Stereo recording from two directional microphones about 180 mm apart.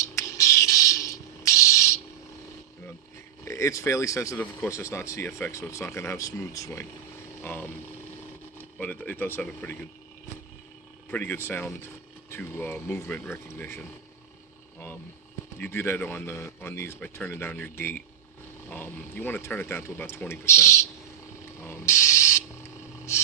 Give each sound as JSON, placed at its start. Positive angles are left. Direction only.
{"t": 0.0, "sound": "a sound", "side_deg": 15}
{"t": 3.4, "sound": "speech", "side_deg": 15}
{"t": 11.1, "sound": "speech", "side_deg": 10}
{"t": 15.5, "sound": "speech", "side_deg": 10}
{"t": 21.6, "sound": "mechanisms", "side_deg": 15}